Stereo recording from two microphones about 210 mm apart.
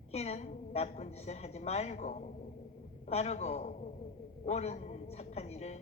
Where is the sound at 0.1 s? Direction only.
30° left (ahead or behind).